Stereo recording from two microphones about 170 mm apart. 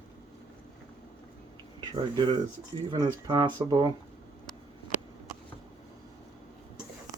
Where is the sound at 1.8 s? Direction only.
25° right (ahead or behind).